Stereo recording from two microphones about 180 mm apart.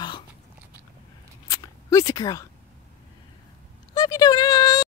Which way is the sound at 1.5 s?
15° left (ahead or behind).